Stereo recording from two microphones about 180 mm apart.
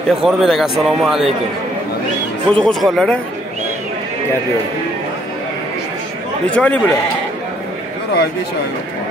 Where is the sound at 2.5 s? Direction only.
5° left (ahead or behind).